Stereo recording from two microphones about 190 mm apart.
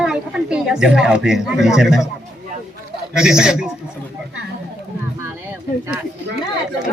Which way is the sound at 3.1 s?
5° right (ahead or behind).